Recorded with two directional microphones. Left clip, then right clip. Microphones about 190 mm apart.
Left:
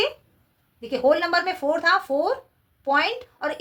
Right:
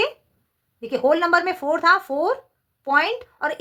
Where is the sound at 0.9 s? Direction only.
40° right (ahead or behind).